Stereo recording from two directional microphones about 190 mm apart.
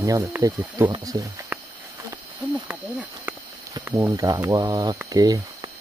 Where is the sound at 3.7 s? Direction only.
20° right (ahead or behind).